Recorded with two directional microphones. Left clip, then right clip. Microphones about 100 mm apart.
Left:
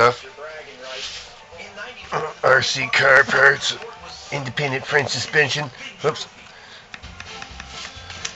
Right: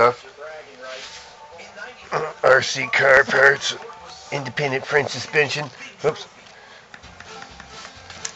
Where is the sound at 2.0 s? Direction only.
45° right (ahead or behind).